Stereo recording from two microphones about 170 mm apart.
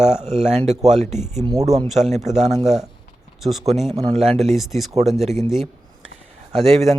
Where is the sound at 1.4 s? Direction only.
20° right (ahead or behind).